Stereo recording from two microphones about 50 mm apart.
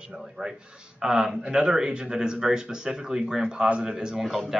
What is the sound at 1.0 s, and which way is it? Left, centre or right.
A man's voice, centre.